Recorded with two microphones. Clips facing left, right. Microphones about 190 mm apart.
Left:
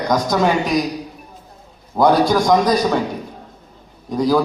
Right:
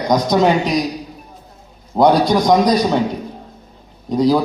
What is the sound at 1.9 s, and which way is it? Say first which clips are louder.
A man's voice: right 1 dB; 20° right (ahead or behind).